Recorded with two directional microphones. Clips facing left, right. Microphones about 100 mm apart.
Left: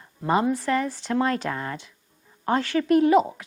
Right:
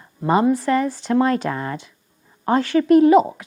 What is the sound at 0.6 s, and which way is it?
A woman's voice, 25° right (ahead or behind).